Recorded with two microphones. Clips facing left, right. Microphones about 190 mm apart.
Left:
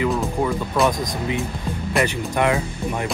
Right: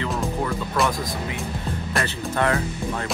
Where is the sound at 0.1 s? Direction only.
Centre (ahead or behind).